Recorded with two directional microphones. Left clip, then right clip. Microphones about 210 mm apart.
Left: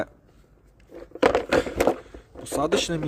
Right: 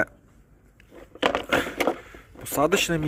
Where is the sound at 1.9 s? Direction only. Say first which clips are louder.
Left 1 dB; 5° right (ahead or behind).